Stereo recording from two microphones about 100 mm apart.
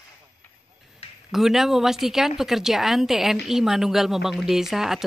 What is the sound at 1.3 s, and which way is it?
Speech, 5° right (ahead or behind).